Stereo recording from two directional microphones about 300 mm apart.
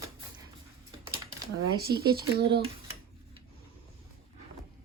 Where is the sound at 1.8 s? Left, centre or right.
Right.